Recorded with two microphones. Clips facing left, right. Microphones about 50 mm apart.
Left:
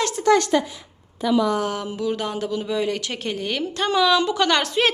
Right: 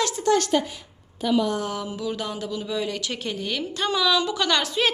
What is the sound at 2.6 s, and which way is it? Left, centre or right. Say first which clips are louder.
A woman's voice: left 4 dB; left.